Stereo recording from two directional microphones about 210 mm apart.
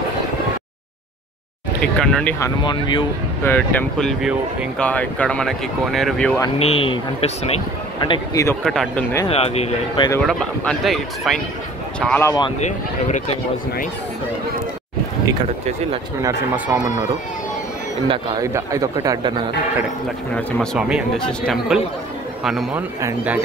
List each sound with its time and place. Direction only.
1.8 s speech: 5° left (ahead or behind)
2.4 s speech: 20° left (ahead or behind)
3.4 s speech: 10° left (ahead or behind)
6.6 s speech: 25° left (ahead or behind)
8.6 s speech: centre (ahead or behind)
9.3 s speech: 30° left (ahead or behind)
10.2 s speech: 5° left (ahead or behind)
12.5 s speech: 35° left (ahead or behind)
16.2 s a man's voice: 10° right (ahead or behind)
18.0 s a man's voice: 20° right (ahead or behind)
20.3 s a man's voice: 5° left (ahead or behind); by 23.4 s 10° right (ahead or behind)